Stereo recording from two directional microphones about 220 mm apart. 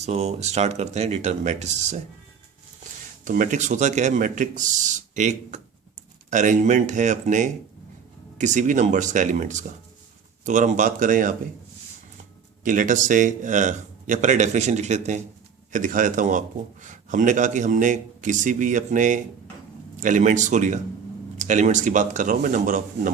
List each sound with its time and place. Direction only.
0.0 s a man's voice: 30° right (ahead or behind)
3.2 s a man's voice: 35° right (ahead or behind)
12.6 s a man's voice: 35° right (ahead or behind)